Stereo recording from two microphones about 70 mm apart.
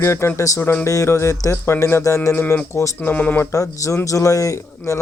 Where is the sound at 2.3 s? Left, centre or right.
Left.